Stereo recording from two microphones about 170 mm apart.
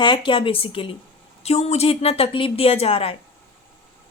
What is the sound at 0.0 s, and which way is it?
A woman's voice, 30° left (ahead or behind).